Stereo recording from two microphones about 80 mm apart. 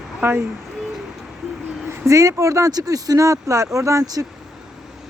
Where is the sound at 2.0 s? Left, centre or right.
Right.